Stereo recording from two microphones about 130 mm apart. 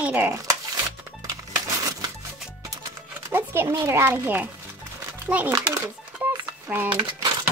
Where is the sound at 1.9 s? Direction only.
30° right (ahead or behind).